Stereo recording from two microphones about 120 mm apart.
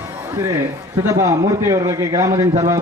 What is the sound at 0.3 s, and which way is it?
A man's voice, 25° right (ahead or behind).